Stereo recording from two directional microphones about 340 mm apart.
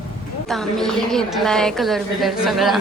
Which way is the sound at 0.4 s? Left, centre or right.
Centre.